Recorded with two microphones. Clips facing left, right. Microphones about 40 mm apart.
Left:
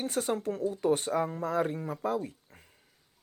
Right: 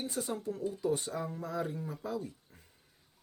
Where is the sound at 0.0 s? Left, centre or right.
Left.